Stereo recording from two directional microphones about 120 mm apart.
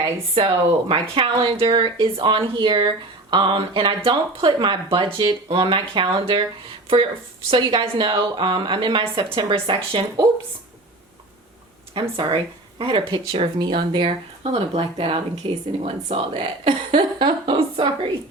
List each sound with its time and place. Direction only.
0.3 s speech: 50° right (ahead or behind)
11.9 s speech: 45° right (ahead or behind)